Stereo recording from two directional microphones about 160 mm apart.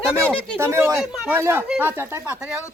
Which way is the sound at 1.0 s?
Centre (ahead or behind).